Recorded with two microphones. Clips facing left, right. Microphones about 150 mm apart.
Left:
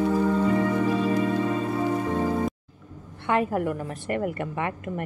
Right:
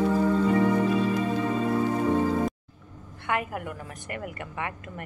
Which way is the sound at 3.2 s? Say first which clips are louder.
Left 6 dB; 30° left (ahead or behind).